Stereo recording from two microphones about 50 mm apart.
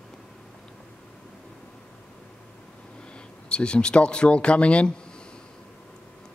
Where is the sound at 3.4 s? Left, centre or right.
Left.